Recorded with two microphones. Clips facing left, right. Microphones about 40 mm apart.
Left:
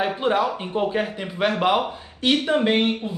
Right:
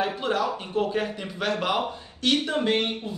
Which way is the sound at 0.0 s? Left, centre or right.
Left.